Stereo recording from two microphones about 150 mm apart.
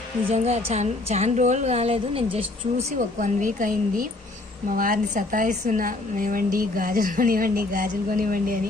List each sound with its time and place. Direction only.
0.3 s a woman's voice: 45° right (ahead or behind)
3.2 s a woman's voice: 60° right (ahead or behind)